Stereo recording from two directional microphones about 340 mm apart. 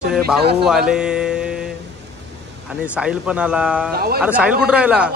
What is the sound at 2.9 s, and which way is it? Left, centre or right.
Speech, centre.